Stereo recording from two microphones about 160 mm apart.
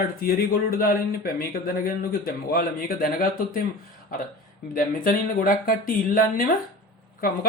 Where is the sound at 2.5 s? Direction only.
65° left (ahead or behind).